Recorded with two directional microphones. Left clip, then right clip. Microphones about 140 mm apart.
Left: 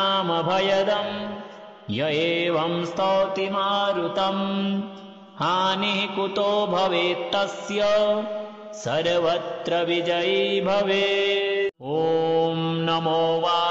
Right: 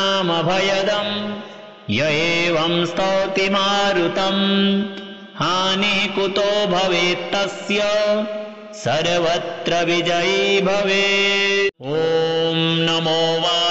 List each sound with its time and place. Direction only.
0.0 s mantra: 20° left (ahead or behind)
3.3 s mantra: 5° left (ahead or behind)
4.4 s music: 25° left (ahead or behind)
5.4 s mantra: 10° left (ahead or behind)
7.6 s music: 20° left (ahead or behind)
8.8 s mantra: 15° left (ahead or behind)
12.8 s mantra: 15° left (ahead or behind)